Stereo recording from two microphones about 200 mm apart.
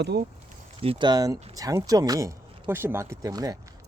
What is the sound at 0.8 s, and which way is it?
Speech, 25° right (ahead or behind).